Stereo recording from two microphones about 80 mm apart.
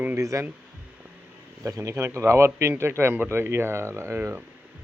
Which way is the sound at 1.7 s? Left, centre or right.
Right.